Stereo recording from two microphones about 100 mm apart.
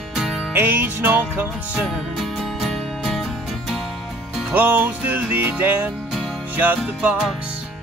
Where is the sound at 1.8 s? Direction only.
Centre (ahead or behind).